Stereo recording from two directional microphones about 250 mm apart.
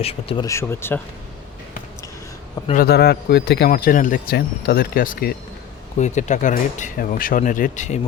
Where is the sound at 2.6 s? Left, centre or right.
Left.